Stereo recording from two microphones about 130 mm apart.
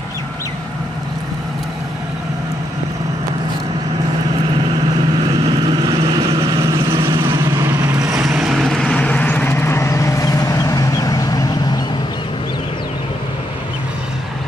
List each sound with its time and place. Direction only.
5.2 s vehicle: 35° right (ahead or behind); by 8.0 s 20° right (ahead or behind)
8.4 s vehicle: 5° right (ahead or behind); by 11.8 s 30° left (ahead or behind)